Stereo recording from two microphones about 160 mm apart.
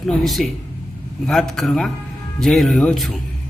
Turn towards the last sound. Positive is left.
turn(degrees=0)  # may be behind; listen again after turning